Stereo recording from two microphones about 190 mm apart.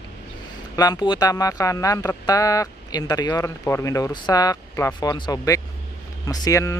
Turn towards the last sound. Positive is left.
turn(degrees=15)  # may be behind; listen again after turning